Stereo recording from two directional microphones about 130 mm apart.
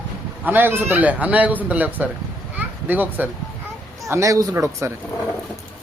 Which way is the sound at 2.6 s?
15° right (ahead or behind).